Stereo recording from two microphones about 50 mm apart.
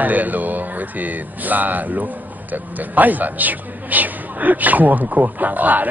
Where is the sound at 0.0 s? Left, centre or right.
Right.